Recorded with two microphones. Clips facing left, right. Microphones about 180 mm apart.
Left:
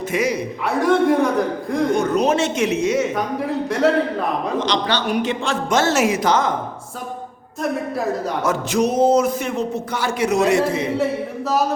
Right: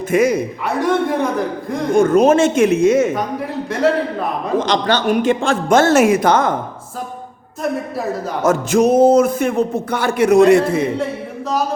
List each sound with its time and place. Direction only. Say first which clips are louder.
0.1 s speech: right 7 dB; 50° right (ahead or behind)
0.7 s a man's voice: left 2 dB; centre (ahead or behind)
2.0 s speech: right 11 dB; 50° right (ahead or behind)
3.7 s a man's voice: right 2 dB; centre (ahead or behind)
4.6 s speech: right 4 dB; 45° right (ahead or behind)
8.4 s speech: right 7 dB; 45° right (ahead or behind)